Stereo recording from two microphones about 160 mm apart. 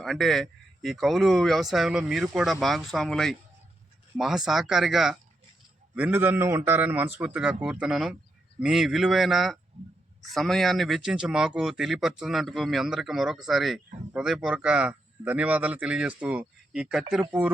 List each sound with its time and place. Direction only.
0.0 s a man's voice: centre (ahead or behind)
9.8 s speech: 45° right (ahead or behind)
10.2 s speech: centre (ahead or behind)